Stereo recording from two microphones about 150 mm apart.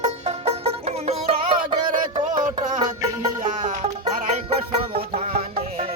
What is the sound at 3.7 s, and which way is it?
Music, 45° right (ahead or behind).